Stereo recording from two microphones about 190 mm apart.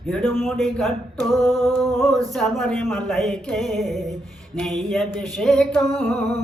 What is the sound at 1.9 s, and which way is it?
Singing, centre (ahead or behind).